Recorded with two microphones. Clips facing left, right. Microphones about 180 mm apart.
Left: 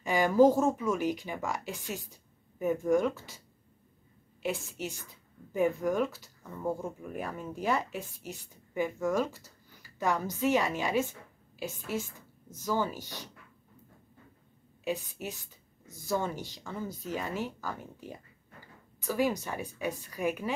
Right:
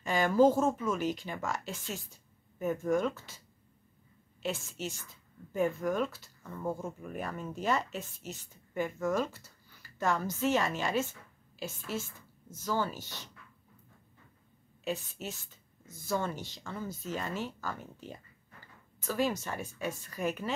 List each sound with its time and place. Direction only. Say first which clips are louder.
0.0 s speech: left 2 dB; 15° left (ahead or behind)
4.4 s speech: left 2 dB; 15° left (ahead or behind)
14.9 s speech: left 2 dB; 15° left (ahead or behind)